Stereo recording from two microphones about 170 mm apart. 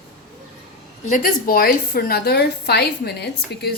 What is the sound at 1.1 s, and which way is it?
A woman's voice, 55° left (ahead or behind).